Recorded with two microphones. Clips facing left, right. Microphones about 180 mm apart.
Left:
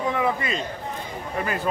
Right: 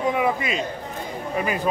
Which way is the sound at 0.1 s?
15° right (ahead or behind).